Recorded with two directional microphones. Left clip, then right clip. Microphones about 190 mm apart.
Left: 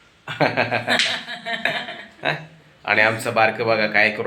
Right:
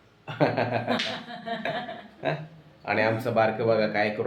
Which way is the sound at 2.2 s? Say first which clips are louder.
Left 6 dB; centre (ahead or behind).